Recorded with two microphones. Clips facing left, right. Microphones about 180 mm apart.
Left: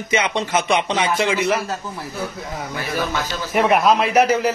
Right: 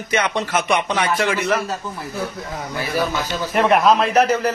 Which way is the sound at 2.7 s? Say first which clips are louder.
Right 2 dB; centre (ahead or behind).